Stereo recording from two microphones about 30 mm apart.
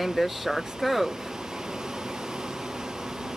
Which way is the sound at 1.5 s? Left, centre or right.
Centre.